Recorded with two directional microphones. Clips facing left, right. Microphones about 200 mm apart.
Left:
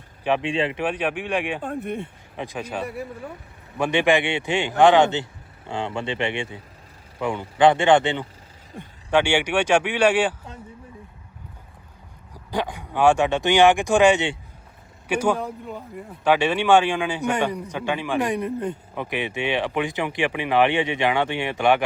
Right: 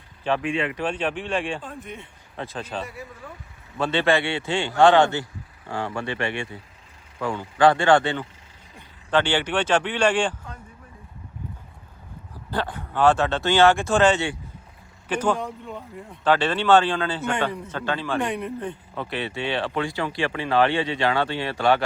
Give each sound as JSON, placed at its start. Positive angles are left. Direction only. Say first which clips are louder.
{"t": 0.4, "sound": "speech", "louder": "left 2 dB", "side_deg": 30}
{"t": 0.8, "sound": "speech", "louder": "left 1 dB", "side_deg": 15}
{"t": 1.6, "sound": "speech", "louder": "left 9 dB", "side_deg": 55}
{"t": 2.3, "sound": "speech", "louder": "left 1 dB", "side_deg": 15}
{"t": 2.8, "sound": "speech", "louder": "left 7 dB", "side_deg": 60}
{"t": 3.8, "sound": "speech", "louder": "left 2 dB", "side_deg": 15}
{"t": 12.3, "sound": "speech", "louder": "left 1 dB", "side_deg": 15}
{"t": 18.3, "sound": "speech", "louder": "left 4 dB", "side_deg": 40}
{"t": 18.9, "sound": "speech", "louder": "even", "side_deg": 15}